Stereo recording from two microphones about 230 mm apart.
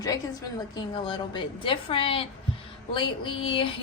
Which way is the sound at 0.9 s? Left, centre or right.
Centre.